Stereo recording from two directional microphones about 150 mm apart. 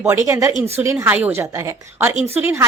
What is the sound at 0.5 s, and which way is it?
Speech, 45° right (ahead or behind).